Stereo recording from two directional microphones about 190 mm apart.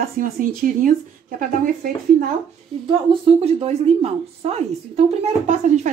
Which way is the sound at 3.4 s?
30° right (ahead or behind).